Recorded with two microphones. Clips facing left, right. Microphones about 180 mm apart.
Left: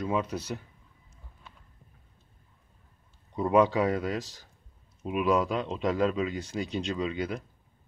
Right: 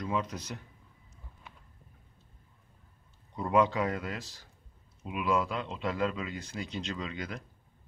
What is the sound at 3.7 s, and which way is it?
Speech, 35° left (ahead or behind).